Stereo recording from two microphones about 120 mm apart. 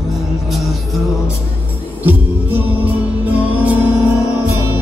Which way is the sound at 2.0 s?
15° right (ahead or behind).